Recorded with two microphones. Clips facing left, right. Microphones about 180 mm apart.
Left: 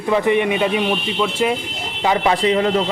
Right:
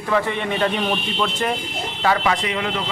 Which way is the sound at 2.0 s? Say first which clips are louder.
Left 2 dB; 20° left (ahead or behind).